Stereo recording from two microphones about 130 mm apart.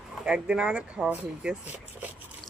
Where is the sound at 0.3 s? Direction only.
5° right (ahead or behind).